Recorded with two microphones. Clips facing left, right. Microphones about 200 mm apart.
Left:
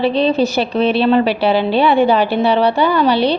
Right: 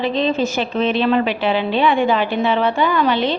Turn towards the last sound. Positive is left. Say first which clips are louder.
# left 4 dB
turn(degrees=35)  # may be behind; listen again after turning